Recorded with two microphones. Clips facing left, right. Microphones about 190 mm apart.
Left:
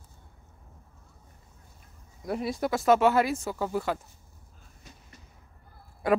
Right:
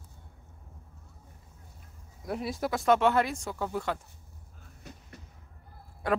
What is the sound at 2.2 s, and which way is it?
Speech, centre (ahead or behind).